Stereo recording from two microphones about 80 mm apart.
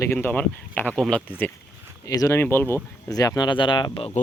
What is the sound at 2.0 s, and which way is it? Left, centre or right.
Speech, left.